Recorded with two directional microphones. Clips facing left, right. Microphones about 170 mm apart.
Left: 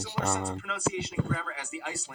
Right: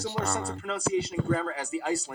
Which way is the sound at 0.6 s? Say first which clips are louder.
Right 4 dB; 35° right (ahead or behind).